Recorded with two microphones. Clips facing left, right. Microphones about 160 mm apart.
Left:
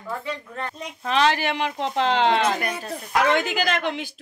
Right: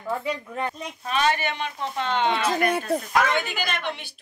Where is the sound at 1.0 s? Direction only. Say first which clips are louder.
Left 3 dB; 90° left.